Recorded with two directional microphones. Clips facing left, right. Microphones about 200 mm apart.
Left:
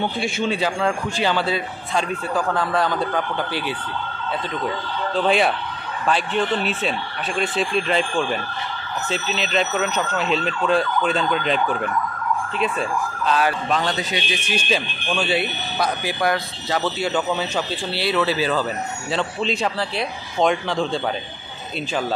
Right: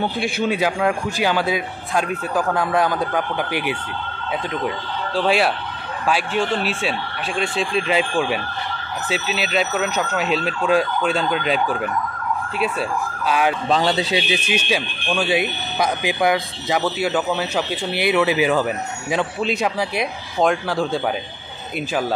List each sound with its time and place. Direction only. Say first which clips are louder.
0.4 s speech: right 2 dB; 10° right (ahead or behind)
5.1 s speech: even; 5° right (ahead or behind)
9.1 s speech: right 1 dB; 5° right (ahead or behind)
13.7 s a man's voice: right 4 dB; 30° right (ahead or behind)
14.7 s speech: right 1 dB; 10° right (ahead or behind)